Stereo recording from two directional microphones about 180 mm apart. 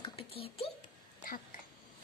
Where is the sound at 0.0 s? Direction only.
30° left (ahead or behind).